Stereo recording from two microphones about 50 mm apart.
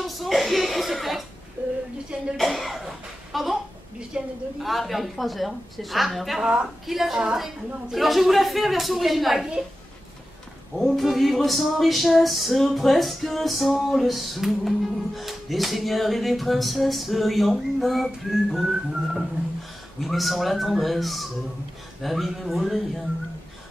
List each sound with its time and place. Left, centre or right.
0.0 s chuckle: centre
1.6 s a woman's voice: right
2.3 s music: centre
4.1 s whistling: centre
4.6 s music: centre
6.4 s a woman's voice: right
6.9 s music: centre
10.8 s music: centre
18.6 s whistling: centre
20.0 s music: centre